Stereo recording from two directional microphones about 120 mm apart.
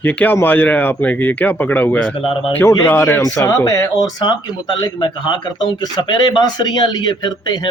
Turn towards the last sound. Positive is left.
turn(degrees=40)  # may be behind; listen again after turning